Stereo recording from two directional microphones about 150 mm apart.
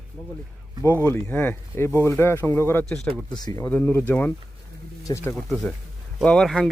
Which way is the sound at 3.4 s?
25° left (ahead or behind).